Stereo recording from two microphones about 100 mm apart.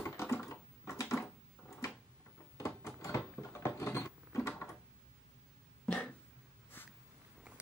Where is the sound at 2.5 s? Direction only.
30° left (ahead or behind).